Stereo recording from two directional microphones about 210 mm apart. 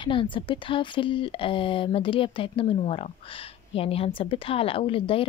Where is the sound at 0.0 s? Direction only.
25° left (ahead or behind).